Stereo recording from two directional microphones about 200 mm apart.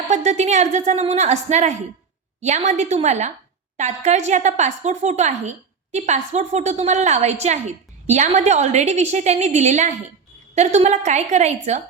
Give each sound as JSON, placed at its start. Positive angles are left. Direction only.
{"t": 0.1, "sound": "a woman's voice", "side_deg": -35}